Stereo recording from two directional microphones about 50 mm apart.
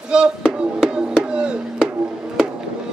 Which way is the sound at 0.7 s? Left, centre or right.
Centre.